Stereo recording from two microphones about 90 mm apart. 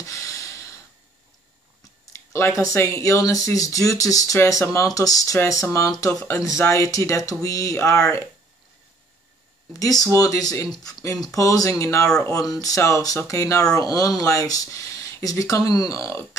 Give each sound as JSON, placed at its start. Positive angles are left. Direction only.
{"t": 0.0, "sound": "a sound", "side_deg": 35}
{"t": 2.1, "sound": "speech", "side_deg": 30}
{"t": 9.8, "sound": "speech", "side_deg": 40}